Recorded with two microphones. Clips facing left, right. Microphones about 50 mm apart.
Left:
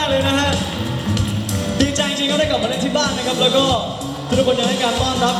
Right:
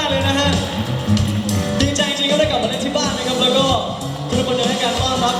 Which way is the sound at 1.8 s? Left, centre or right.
Left.